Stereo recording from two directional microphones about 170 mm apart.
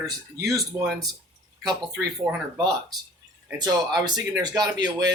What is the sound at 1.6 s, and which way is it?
Speech, 20° right (ahead or behind).